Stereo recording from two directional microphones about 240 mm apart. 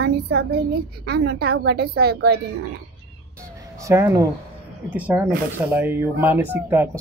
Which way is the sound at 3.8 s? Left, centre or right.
Centre.